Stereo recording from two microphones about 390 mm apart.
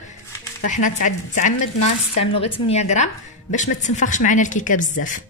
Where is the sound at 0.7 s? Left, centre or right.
Centre.